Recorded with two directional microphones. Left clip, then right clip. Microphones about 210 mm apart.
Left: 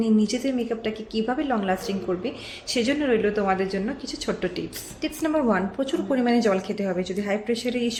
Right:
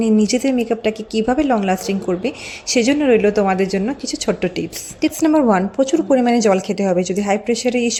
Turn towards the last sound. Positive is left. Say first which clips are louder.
# right 8 dB
turn(degrees=-35)  # may be behind; listen again after turning